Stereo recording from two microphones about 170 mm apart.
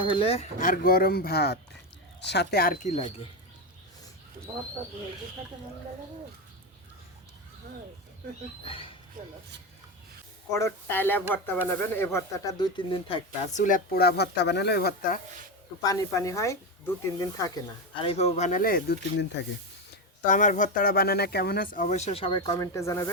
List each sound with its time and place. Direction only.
0.0 s speech: 30° left (ahead or behind)
0.6 s speech: 55° left (ahead or behind)
2.8 s speech: 40° left (ahead or behind)
8.6 s speech: 30° left (ahead or behind)
10.5 s speech: 15° left (ahead or behind); by 13.6 s 30° left (ahead or behind)
13.6 s speech: 50° left (ahead or behind); by 15.1 s 70° left (ahead or behind)
15.8 s speech: 20° left (ahead or behind)
18.0 s speech: 35° left (ahead or behind); by 19.3 s 65° left (ahead or behind)
20.2 s speech: 50° left (ahead or behind); by 22.5 s 30° left (ahead or behind)
22.5 s speech: 15° left (ahead or behind)